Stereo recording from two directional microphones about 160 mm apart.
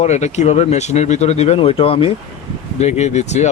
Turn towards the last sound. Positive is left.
turn(degrees=45)  # may be behind; listen again after turning